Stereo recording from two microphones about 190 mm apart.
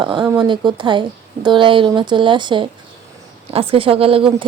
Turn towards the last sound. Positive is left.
turn(degrees=-30)  # may be behind; listen again after turning